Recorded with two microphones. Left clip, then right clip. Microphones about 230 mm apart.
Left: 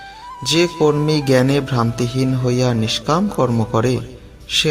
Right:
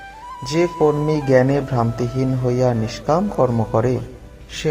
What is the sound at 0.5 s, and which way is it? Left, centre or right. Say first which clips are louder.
A man's voice: left 2 dB; left.